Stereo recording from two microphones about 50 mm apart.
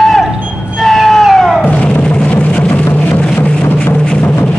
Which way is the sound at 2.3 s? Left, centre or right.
Left.